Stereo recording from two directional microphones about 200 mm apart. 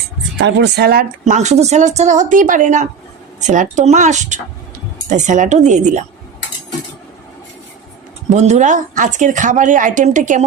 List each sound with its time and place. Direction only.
0.3 s speech: 60° right (ahead or behind)
1.2 s a woman's voice: 35° right (ahead or behind)
8.3 s a woman's voice: 35° right (ahead or behind)